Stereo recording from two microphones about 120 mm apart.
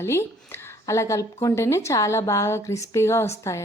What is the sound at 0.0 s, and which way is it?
Speech, 20° left (ahead or behind).